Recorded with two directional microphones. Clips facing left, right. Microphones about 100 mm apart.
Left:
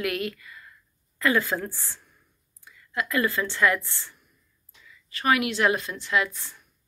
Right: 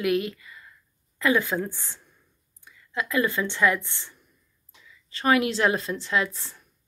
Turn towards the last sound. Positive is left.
turn(degrees=-30)  # may be behind; listen again after turning